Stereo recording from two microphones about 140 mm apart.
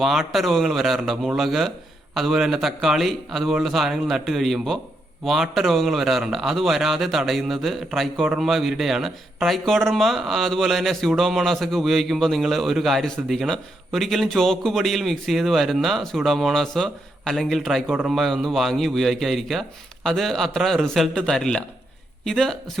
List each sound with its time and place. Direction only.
0.0 s a man's voice: centre (ahead or behind)